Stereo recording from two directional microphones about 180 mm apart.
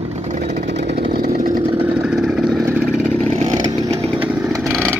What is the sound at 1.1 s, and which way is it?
Chainsaw, 55° right (ahead or behind).